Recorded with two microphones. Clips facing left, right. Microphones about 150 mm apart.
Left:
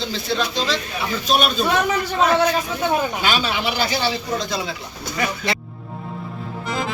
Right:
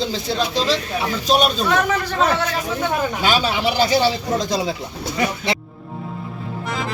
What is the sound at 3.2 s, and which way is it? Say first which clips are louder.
A man's voice: right 3 dB; 35° right (ahead or behind).